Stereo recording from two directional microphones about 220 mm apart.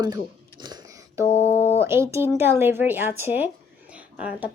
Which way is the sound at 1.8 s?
10° right (ahead or behind).